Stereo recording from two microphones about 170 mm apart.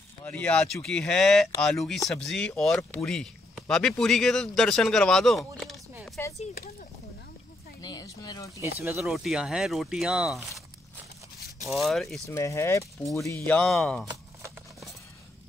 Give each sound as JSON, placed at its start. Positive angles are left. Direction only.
{"t": 0.2, "sound": "speech", "side_deg": 5}
{"t": 7.8, "sound": "speech", "side_deg": 20}
{"t": 8.5, "sound": "speech", "side_deg": -15}
{"t": 8.9, "sound": "speech", "side_deg": 0}
{"t": 11.7, "sound": "speech", "side_deg": 0}
{"t": 12.3, "sound": "speech", "side_deg": 15}
{"t": 13.5, "sound": "speech", "side_deg": 5}